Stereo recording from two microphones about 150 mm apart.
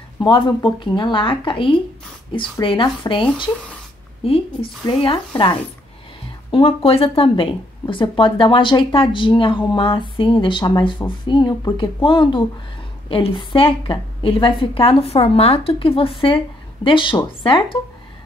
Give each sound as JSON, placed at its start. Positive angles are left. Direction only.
{"t": 0.2, "sound": "speech", "side_deg": 35}
{"t": 4.8, "sound": "speech", "side_deg": 35}
{"t": 6.5, "sound": "speech", "side_deg": 40}